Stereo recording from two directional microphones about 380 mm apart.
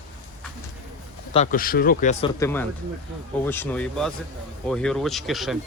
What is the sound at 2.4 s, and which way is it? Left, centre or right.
Speech, centre.